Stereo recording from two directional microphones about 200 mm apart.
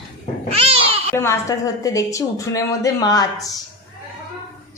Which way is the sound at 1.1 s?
15° left (ahead or behind).